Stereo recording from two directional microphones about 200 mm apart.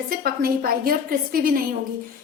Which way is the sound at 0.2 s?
45° right (ahead or behind).